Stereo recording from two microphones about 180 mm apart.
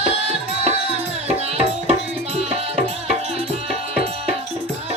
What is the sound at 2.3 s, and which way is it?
Music, 35° right (ahead or behind).